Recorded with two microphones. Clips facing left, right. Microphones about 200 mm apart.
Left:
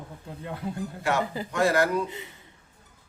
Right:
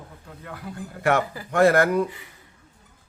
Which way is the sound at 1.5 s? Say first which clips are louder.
Right 6 dB; 55° right (ahead or behind).